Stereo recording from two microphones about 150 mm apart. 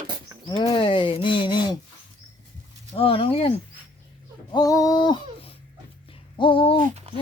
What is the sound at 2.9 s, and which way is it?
Speech, 40° left (ahead or behind).